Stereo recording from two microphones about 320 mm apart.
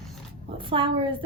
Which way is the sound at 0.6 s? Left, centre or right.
Centre.